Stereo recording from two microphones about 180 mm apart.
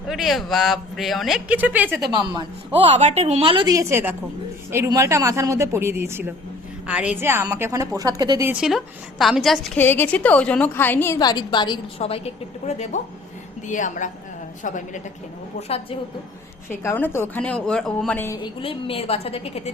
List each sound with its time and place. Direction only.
0.1 s speech: centre (ahead or behind)
2.0 s a woman's voice: 25° right (ahead or behind)
2.8 s a woman's voice: 40° right (ahead or behind); by 8.4 s 20° right (ahead or behind)
8.4 s a woman's voice: centre (ahead or behind); by 15.0 s 45° left (ahead or behind)
15.6 s a woman's voice: 35° left (ahead or behind)
16.6 s a woman's voice: 10° left (ahead or behind)
18.4 s a woman's voice: 30° left (ahead or behind)